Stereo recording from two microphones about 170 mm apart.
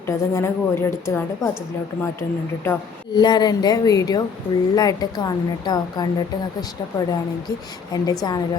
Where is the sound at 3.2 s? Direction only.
25° left (ahead or behind).